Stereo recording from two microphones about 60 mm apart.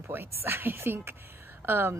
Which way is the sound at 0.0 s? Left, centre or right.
Right.